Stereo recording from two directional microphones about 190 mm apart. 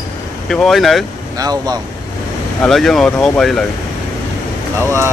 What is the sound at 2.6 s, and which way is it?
Speech, centre (ahead or behind).